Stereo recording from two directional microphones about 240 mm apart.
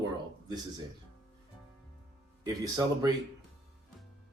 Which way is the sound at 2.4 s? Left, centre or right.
Centre.